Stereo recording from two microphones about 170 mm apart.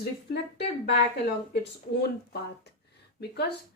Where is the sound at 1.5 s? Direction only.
75° left (ahead or behind).